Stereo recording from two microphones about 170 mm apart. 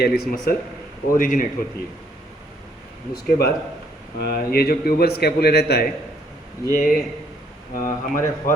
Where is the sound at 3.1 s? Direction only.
65° left (ahead or behind).